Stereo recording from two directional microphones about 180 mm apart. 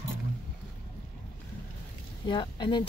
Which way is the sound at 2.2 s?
25° left (ahead or behind).